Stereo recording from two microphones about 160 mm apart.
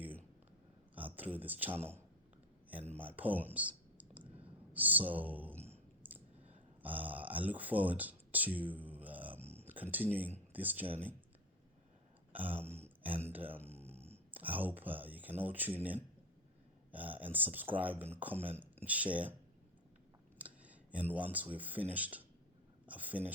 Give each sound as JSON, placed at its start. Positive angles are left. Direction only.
{"t": 0.9, "sound": "speech", "side_deg": -10}
{"t": 3.0, "sound": "speech", "side_deg": -10}
{"t": 3.5, "sound": "clicking", "side_deg": -10}
{"t": 4.7, "sound": "speech", "side_deg": -10}
{"t": 6.0, "sound": "clicking", "side_deg": -10}
{"t": 6.8, "sound": "speech", "side_deg": -10}
{"t": 9.4, "sound": "a sound", "side_deg": -40}
{"t": 9.7, "sound": "speech", "side_deg": -10}
{"t": 12.3, "sound": "a sound", "side_deg": -10}
{"t": 13.2, "sound": "speech", "side_deg": -10}
{"t": 13.9, "sound": "a sound", "side_deg": -40}
{"t": 14.3, "sound": "speech", "side_deg": -10}
{"t": 20.4, "sound": "speech", "side_deg": -10}